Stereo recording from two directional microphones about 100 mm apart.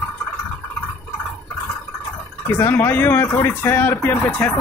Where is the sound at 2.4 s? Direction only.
20° left (ahead or behind).